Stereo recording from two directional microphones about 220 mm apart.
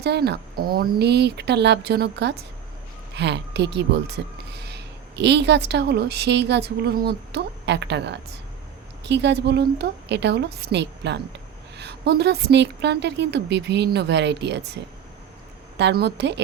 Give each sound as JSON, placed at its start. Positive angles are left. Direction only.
{"t": 0.0, "sound": "a woman's voice", "side_deg": -50}
{"t": 15.8, "sound": "a woman's voice", "side_deg": -50}